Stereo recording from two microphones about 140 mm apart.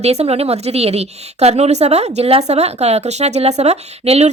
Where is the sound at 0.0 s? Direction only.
50° right (ahead or behind).